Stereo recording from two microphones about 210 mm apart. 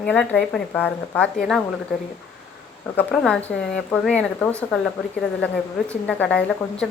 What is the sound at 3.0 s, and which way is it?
A woman's voice, 5° left (ahead or behind).